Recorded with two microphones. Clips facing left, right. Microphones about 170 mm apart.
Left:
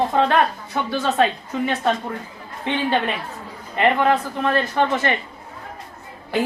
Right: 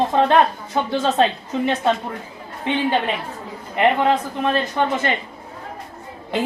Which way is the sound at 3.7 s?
20° right (ahead or behind).